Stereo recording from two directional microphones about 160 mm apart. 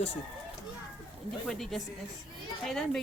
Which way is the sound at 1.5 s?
Centre (ahead or behind).